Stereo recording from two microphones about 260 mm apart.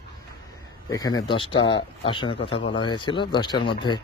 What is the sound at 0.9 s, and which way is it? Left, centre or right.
Speech, centre.